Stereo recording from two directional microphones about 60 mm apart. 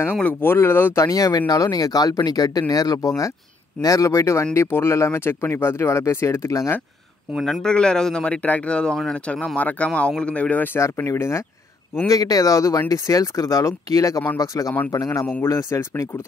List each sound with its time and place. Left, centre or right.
0.1 s speech: left
0.9 s speech: left
3.8 s speech: left
7.6 s speech: centre
11.0 s speech: left
12.1 s speech: left
15.4 s speech: left